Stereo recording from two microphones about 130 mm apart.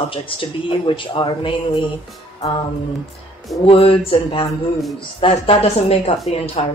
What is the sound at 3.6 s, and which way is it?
Speech, 45° left (ahead or behind).